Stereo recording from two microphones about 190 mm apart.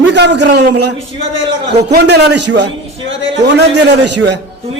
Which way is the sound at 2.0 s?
60° right (ahead or behind).